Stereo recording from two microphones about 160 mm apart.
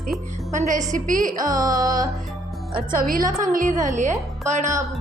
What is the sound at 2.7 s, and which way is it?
A woman's voice, 65° right (ahead or behind).